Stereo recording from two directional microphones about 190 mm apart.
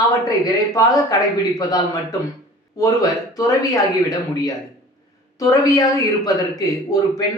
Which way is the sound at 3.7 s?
20° left (ahead or behind).